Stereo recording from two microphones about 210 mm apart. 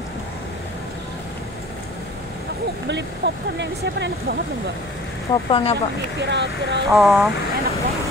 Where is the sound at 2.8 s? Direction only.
55° right (ahead or behind).